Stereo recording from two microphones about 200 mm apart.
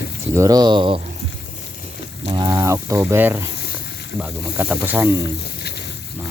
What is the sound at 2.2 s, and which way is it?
Speech, 20° right (ahead or behind).